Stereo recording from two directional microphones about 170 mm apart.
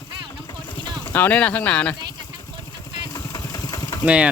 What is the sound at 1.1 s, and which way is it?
Speech, 10° left (ahead or behind).